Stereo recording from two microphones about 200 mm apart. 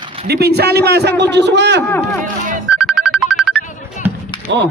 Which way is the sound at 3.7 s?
40° left (ahead or behind).